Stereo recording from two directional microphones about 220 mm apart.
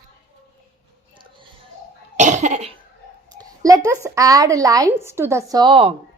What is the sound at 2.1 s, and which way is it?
Cough, 30° right (ahead or behind).